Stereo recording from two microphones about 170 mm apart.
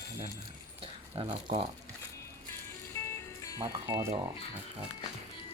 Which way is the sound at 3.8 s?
20° right (ahead or behind).